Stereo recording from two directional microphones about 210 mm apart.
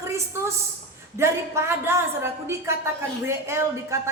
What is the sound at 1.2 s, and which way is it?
A woman's voice, 10° right (ahead or behind).